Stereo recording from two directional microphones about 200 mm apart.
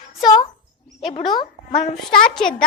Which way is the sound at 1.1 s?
30° left (ahead or behind).